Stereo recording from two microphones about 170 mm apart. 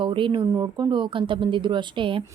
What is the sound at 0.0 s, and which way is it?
Speech, 30° right (ahead or behind).